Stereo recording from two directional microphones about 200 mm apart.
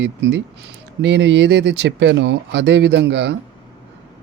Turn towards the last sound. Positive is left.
turn(degrees=-60)  # may be behind; listen again after turning